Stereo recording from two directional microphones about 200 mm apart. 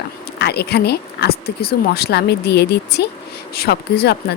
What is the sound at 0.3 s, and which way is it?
A woman's voice, 55° left (ahead or behind).